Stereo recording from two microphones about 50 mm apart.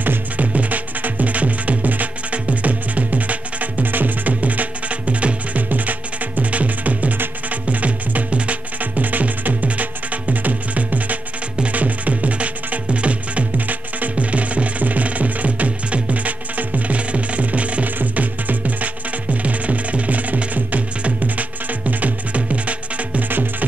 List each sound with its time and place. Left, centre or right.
0.0 s music: right